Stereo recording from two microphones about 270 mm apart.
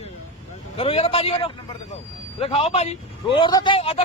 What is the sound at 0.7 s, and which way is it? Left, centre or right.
A man's voice, left.